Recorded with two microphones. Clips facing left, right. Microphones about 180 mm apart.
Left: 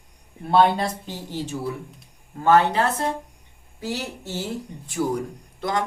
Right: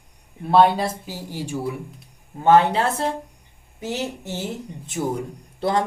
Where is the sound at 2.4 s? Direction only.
20° right (ahead or behind).